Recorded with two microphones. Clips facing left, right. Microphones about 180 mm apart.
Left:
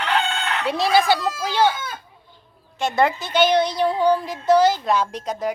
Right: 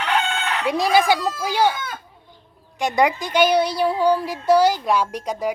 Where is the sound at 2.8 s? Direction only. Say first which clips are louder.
Right 1 dB; 15° right (ahead or behind).